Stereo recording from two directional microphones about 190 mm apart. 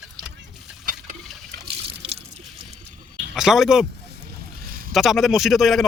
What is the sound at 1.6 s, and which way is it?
Water, 60° right (ahead or behind).